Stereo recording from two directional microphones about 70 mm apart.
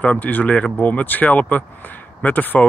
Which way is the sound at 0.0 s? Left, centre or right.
Left.